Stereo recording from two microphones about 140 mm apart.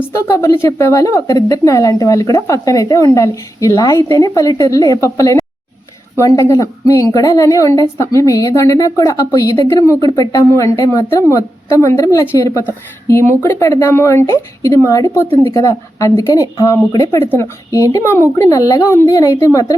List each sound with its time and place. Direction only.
0.3 s a woman's voice: 20° left (ahead or behind)
17.2 s a woman's voice: 15° left (ahead or behind)